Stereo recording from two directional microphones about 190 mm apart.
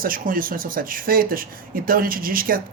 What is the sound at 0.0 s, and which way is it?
Speech, 45° right (ahead or behind).